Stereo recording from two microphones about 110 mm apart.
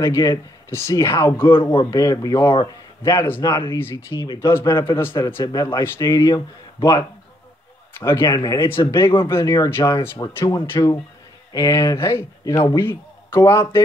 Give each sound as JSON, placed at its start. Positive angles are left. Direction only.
{"t": 0.0, "sound": "speech", "side_deg": 30}
{"t": 1.6, "sound": "speech", "side_deg": 55}
{"t": 1.9, "sound": "speech", "side_deg": 30}
{"t": 2.5, "sound": "speech", "side_deg": 45}
{"t": 3.0, "sound": "a man's voice", "side_deg": 30}
{"t": 4.1, "sound": "speech", "side_deg": 45}
{"t": 4.4, "sound": "speech", "side_deg": 25}
{"t": 5.4, "sound": "speech", "side_deg": 35}
{"t": 8.3, "sound": "speech", "side_deg": 45}
{"t": 8.6, "sound": "speech", "side_deg": 25}